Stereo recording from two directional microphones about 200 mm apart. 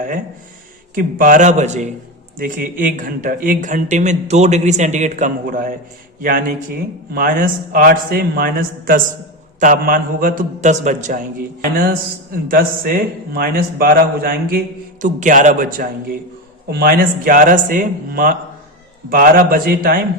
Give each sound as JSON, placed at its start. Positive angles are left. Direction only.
{"t": 0.9, "sound": "a man's voice", "side_deg": -40}
{"t": 16.6, "sound": "a man's voice", "side_deg": -50}